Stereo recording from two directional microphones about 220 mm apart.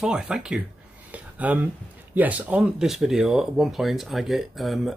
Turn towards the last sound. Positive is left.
turn(degrees=0)  # may be behind; listen again after turning